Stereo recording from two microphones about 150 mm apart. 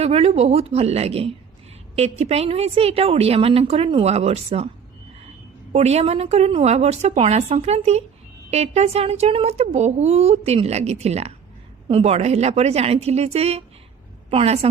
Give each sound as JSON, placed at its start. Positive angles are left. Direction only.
{"t": 0.0, "sound": "speech", "side_deg": -45}
{"t": 5.7, "sound": "a woman's voice", "side_deg": -45}